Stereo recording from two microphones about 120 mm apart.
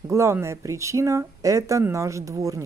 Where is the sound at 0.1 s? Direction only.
20° right (ahead or behind).